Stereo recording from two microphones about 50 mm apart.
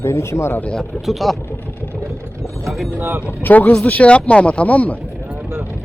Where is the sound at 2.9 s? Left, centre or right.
Right.